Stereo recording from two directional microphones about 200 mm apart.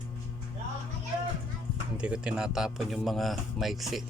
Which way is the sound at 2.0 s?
5° right (ahead or behind).